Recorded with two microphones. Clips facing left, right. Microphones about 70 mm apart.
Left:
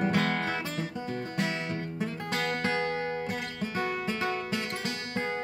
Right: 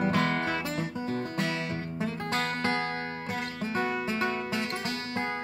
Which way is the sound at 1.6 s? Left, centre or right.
Centre.